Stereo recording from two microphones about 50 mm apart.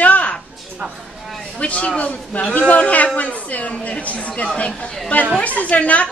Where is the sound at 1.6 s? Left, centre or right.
Left.